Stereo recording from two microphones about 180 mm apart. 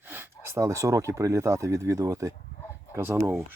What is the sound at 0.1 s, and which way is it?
Speech, 15° right (ahead or behind).